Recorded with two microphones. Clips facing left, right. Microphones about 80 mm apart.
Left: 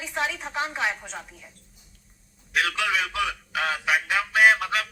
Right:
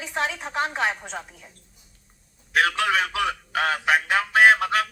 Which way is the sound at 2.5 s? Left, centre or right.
Right.